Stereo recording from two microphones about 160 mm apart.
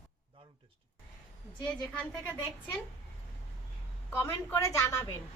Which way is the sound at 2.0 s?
10° left (ahead or behind).